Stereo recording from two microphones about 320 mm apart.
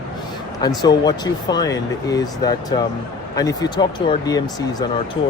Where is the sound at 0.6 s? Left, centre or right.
Centre.